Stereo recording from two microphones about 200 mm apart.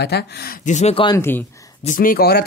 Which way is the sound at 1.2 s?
10° left (ahead or behind).